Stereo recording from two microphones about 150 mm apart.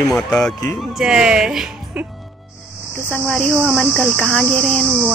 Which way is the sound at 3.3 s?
Centre (ahead or behind).